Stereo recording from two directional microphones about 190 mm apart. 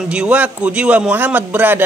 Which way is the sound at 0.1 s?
5° right (ahead or behind).